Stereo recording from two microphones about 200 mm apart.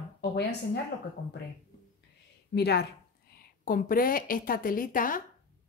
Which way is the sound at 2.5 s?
55° left (ahead or behind).